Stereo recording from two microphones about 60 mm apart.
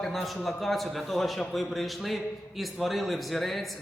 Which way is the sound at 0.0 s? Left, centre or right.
Centre.